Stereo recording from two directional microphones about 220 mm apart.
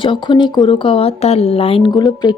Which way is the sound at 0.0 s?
20° left (ahead or behind).